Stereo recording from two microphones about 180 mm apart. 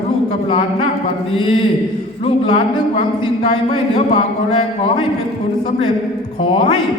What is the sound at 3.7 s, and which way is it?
Speech, 25° left (ahead or behind).